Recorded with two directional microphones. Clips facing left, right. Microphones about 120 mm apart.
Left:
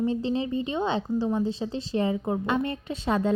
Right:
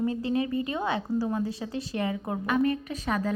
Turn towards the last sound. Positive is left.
turn(degrees=25)  # may be behind; listen again after turning